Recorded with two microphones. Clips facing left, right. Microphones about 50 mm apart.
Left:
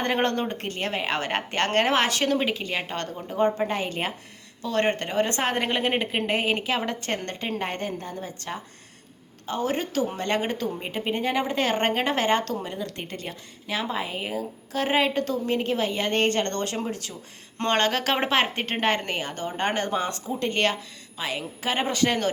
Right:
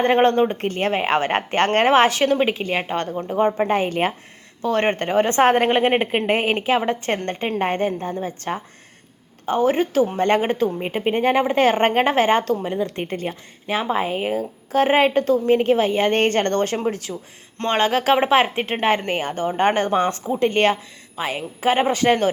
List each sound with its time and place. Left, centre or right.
0.0 s a woman's voice: right
17.7 s a woman's voice: centre
19.0 s a woman's voice: right